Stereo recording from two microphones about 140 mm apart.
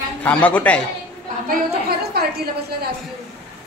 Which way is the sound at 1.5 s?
90° right.